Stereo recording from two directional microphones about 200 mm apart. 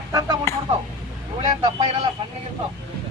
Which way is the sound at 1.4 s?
25° right (ahead or behind).